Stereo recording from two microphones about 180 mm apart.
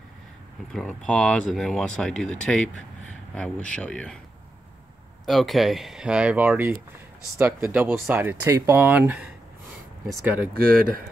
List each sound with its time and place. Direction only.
0.7 s speech: 5° left (ahead or behind)
5.2 s speech: centre (ahead or behind)
10.5 s speech: 55° right (ahead or behind)